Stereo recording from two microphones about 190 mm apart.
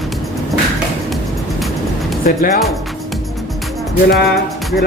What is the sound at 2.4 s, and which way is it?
Speech, 50° left (ahead or behind).